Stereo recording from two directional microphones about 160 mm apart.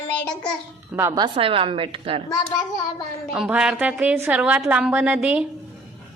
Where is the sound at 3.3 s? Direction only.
5° right (ahead or behind).